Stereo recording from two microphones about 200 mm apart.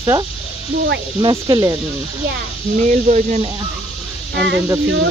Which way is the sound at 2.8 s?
40° right (ahead or behind).